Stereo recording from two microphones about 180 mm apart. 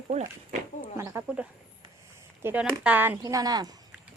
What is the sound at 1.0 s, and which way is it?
Speech, 15° right (ahead or behind).